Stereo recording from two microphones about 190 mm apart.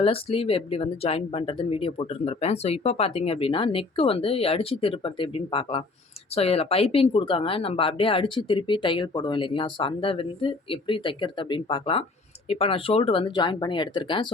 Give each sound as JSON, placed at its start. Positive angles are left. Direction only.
{"t": 0.0, "sound": "speech", "side_deg": 30}